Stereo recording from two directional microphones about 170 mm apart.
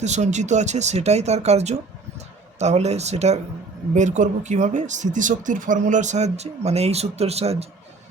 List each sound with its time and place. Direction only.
0.0 s speech: 45° right (ahead or behind)